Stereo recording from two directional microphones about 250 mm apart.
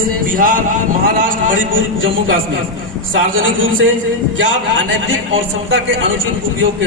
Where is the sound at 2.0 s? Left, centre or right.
Right.